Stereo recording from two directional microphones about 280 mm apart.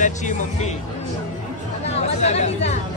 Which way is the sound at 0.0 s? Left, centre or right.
Left.